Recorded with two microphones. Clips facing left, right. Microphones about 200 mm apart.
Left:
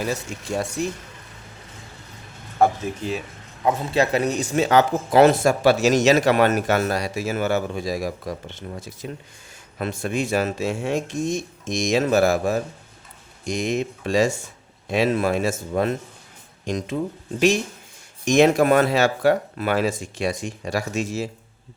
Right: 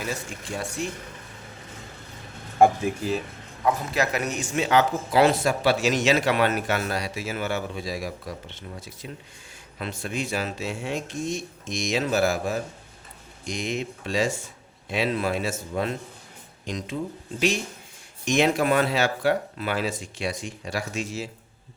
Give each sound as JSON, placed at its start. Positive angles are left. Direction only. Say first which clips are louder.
{"t": 0.5, "sound": "speech", "louder": "left 6 dB", "side_deg": 40}
{"t": 2.6, "sound": "speech", "louder": "right 1 dB", "side_deg": -10}
{"t": 3.6, "sound": "speech", "louder": "left 4 dB", "side_deg": 25}
{"t": 18.3, "sound": "speech", "louder": "left 6 dB", "side_deg": 45}